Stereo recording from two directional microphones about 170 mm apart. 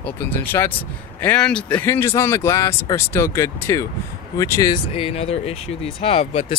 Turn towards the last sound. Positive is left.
turn(degrees=35)  # may be behind; listen again after turning